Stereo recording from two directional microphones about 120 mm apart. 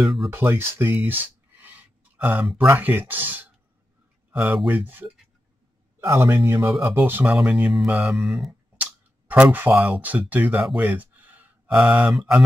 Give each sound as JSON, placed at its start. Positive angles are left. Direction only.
{"t": 0.0, "sound": "mantra", "side_deg": 0}
{"t": 0.3, "sound": "speech", "side_deg": -20}
{"t": 1.0, "sound": "a sound", "side_deg": -15}
{"t": 2.5, "sound": "speech", "side_deg": -15}
{"t": 6.1, "sound": "speech", "side_deg": -20}
{"t": 7.7, "sound": "mantra", "side_deg": -5}
{"t": 9.3, "sound": "speech", "side_deg": -15}